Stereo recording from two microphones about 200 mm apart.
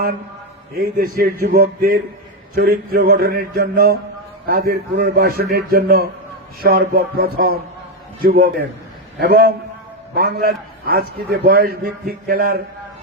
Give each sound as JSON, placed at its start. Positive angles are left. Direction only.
{"t": 0.8, "sound": "a man's voice", "side_deg": -45}